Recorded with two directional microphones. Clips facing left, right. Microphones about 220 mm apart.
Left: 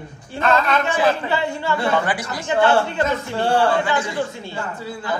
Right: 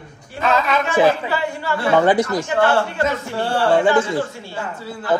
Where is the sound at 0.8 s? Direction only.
25° left (ahead or behind).